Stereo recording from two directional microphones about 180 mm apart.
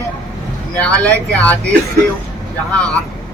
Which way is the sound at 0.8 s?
10° left (ahead or behind).